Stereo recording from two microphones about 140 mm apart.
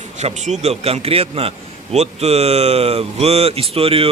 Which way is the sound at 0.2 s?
55° right (ahead or behind).